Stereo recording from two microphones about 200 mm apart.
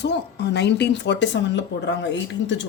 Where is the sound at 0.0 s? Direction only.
60° left (ahead or behind).